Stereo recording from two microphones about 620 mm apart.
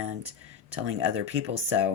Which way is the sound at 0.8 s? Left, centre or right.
Centre.